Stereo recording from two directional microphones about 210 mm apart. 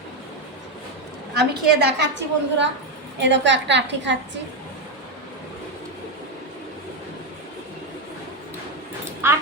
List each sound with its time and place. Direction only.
1.4 s a woman's voice: 50° right (ahead or behind)
9.2 s a woman's voice: 10° right (ahead or behind)